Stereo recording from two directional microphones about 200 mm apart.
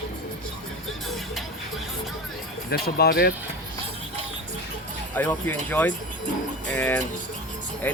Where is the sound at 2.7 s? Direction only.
50° left (ahead or behind).